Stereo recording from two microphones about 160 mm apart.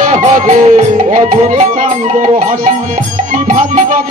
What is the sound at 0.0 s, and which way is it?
Music, 55° right (ahead or behind).